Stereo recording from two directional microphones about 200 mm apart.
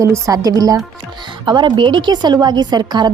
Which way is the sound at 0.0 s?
15° right (ahead or behind).